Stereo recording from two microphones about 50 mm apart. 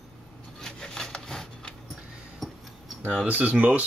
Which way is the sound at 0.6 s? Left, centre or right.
Centre.